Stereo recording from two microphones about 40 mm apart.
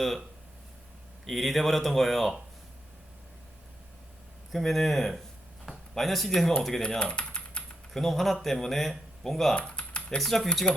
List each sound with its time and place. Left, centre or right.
1.3 s speech: centre
4.5 s speech: centre
7.0 s typing: left
7.9 s speech: centre
9.6 s typing: left
10.2 s speech: centre